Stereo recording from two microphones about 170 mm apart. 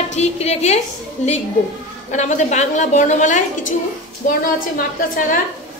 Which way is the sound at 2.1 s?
45° left (ahead or behind).